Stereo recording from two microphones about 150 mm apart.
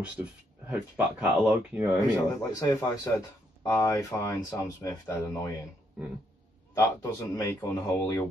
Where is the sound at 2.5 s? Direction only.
20° left (ahead or behind).